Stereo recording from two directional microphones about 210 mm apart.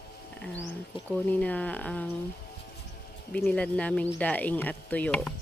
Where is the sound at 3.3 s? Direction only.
5° left (ahead or behind).